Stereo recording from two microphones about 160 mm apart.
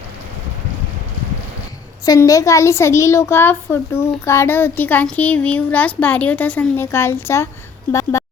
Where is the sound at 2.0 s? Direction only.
20° left (ahead or behind).